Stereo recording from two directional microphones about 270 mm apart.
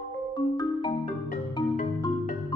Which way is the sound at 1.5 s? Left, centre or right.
Centre.